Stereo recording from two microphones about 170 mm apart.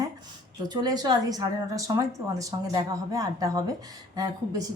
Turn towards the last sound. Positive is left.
turn(degrees=-20)  # may be behind; listen again after turning